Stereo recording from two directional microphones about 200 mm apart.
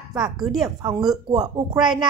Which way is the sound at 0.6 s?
15° right (ahead or behind).